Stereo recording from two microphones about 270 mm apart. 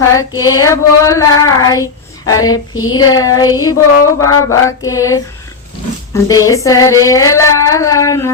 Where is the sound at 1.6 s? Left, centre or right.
Centre.